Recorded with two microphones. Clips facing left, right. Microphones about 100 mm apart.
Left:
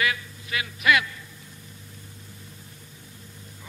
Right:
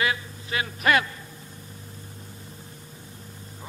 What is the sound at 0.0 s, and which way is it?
Speech, 30° right (ahead or behind).